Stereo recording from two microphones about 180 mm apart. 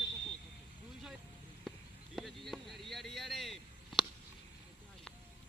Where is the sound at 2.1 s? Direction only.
Centre (ahead or behind).